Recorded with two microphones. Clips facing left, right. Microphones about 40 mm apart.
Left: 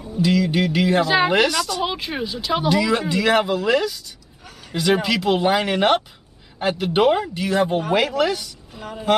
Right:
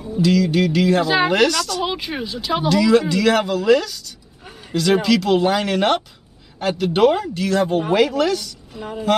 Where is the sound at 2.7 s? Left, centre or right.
Centre.